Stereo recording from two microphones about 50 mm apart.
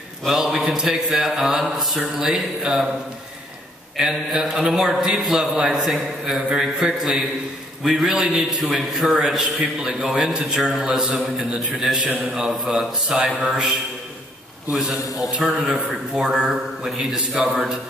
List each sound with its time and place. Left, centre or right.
0.3 s a man's voice: centre
3.9 s a man's voice: centre
7.8 s a man's voice: centre
8.7 s a man's voice: centre
12.0 s a man's voice: right
12.6 s a man's voice: centre
14.8 s a man's voice: centre